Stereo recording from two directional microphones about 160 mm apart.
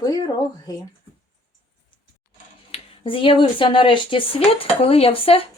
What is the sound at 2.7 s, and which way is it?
Speech, 35° left (ahead or behind).